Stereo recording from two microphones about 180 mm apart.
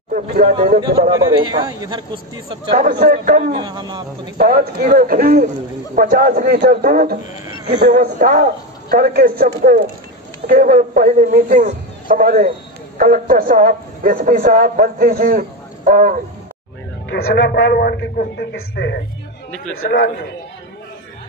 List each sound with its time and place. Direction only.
0.1 s speech: 50° right (ahead or behind)
0.7 s a man's voice: 25° right (ahead or behind)
2.7 s a man's voice: 55° right (ahead or behind)
3.5 s a man's voice: 25° right (ahead or behind)
4.4 s a man's voice: 55° right (ahead or behind)
7.4 s a sound: 25° right (ahead or behind)
7.8 s a man's voice: 55° right (ahead or behind)
17.1 s a man's voice: 70° left (ahead or behind)